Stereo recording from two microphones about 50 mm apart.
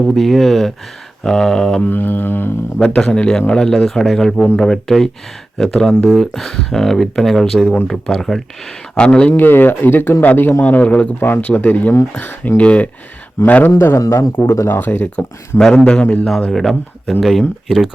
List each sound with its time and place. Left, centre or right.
0.1 s speech: centre
1.8 s speech: left
2.7 s speech: centre
9.0 s a man's voice: left
9.3 s speech: left
10.6 s a man's voice: left
12.1 s a man's voice: left
13.7 s a man's voice: left
14.4 s speech: left
14.7 s speech: left
15.0 s a man's voice: left
16.5 s speech: centre